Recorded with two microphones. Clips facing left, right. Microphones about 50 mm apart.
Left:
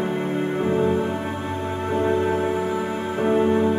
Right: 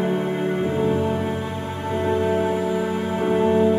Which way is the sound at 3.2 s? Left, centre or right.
Left.